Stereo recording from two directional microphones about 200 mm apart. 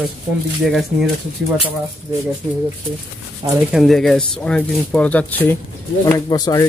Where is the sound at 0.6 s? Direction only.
Centre (ahead or behind).